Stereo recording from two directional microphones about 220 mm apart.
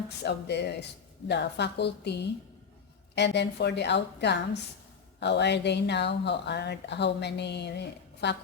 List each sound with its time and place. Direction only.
0.3 s a woman's voice: 50° left (ahead or behind)